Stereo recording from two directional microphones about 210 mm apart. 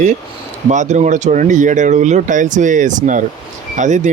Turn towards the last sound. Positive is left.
turn(degrees=-35)  # may be behind; listen again after turning